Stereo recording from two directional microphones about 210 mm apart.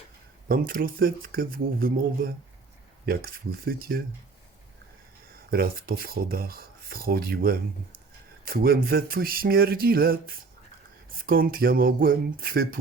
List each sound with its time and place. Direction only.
0.4 s speech: 45° right (ahead or behind)
5.5 s speech: 45° right (ahead or behind)